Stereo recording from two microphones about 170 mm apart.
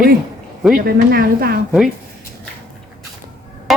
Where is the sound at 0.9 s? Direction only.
60° right (ahead or behind).